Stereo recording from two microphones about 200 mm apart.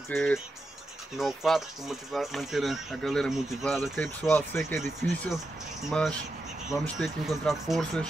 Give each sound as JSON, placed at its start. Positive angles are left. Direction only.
{"t": 0.1, "sound": "speech", "side_deg": 5}
{"t": 5.0, "sound": "speech", "side_deg": 0}